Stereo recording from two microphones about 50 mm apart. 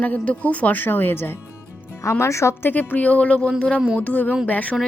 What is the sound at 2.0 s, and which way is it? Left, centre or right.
Speech, left.